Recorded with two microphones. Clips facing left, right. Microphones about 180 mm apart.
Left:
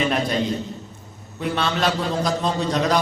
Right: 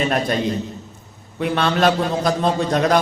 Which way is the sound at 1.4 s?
55° right (ahead or behind).